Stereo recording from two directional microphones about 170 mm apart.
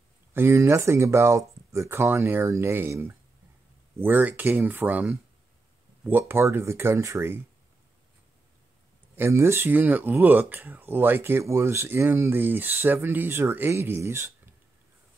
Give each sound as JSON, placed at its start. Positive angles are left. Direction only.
{"t": 0.3, "sound": "speech", "side_deg": -15}
{"t": 9.1, "sound": "speech", "side_deg": -15}